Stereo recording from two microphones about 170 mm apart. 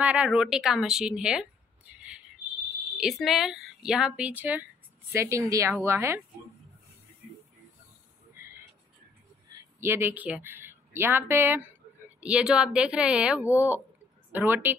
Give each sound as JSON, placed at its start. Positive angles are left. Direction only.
{"t": 0.0, "sound": "a woman's voice", "side_deg": -5}
{"t": 9.8, "sound": "a woman's voice", "side_deg": -15}